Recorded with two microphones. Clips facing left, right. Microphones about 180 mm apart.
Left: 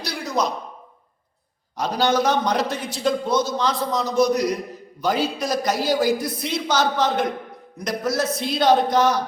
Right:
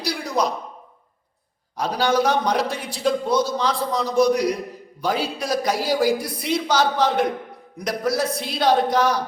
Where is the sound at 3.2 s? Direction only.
35° right (ahead or behind).